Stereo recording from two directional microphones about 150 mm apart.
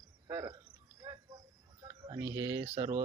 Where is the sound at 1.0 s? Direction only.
20° right (ahead or behind).